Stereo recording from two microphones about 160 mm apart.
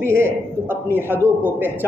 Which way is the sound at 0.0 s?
15° right (ahead or behind).